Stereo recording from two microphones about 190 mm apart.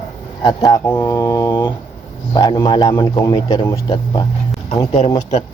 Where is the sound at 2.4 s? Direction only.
20° left (ahead or behind).